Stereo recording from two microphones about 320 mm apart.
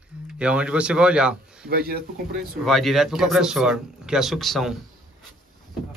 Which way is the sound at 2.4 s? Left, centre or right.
Centre.